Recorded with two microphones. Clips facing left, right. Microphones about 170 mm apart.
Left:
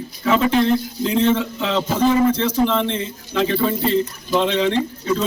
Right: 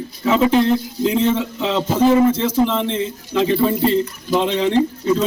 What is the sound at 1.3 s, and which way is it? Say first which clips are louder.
Speech: right 1 dB; 10° right (ahead or behind).